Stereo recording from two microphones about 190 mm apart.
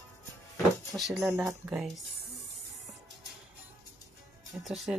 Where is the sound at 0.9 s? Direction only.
Centre (ahead or behind).